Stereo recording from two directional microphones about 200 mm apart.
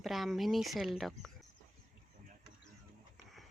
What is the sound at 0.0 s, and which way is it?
Speech, centre (ahead or behind).